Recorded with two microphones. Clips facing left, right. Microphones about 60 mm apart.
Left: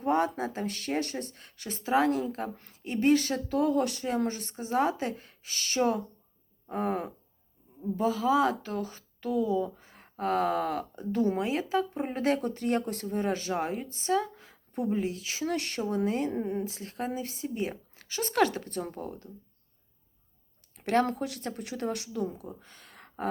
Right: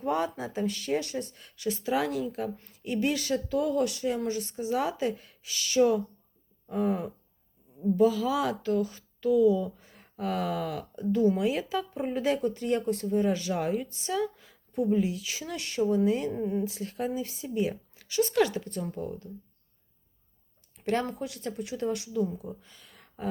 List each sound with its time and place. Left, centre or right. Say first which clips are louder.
0.0 s speech: left 2 dB; left
7.9 s speech: even; left
11.9 s speech: even; left
13.5 s a woman's voice: right 2 dB; left
15.4 s speech: right 3 dB; left
16.6 s speech: right 3 dB; left
20.7 s speech: left 3 dB; left